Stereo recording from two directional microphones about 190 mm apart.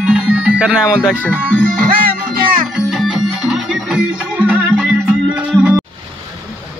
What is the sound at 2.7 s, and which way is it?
Music, centre (ahead or behind).